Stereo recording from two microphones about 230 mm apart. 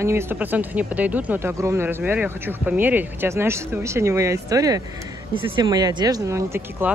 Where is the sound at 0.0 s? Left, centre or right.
Centre.